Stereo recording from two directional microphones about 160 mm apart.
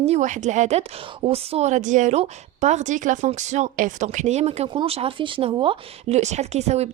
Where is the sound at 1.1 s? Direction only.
35° right (ahead or behind).